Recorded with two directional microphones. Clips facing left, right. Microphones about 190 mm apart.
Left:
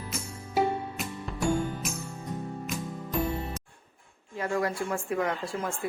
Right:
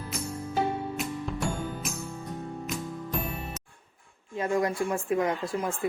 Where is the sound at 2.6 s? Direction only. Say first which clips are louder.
Right 1 dB; centre (ahead or behind).